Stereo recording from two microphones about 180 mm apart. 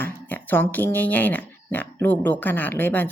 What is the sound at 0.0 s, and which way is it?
Speech, 10° left (ahead or behind).